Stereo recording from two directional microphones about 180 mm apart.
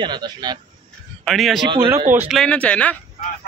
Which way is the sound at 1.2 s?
Centre (ahead or behind).